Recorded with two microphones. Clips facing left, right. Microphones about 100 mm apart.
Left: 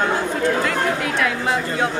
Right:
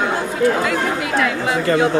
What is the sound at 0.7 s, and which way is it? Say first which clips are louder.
Speech: right 1 dB; 5° right (ahead or behind).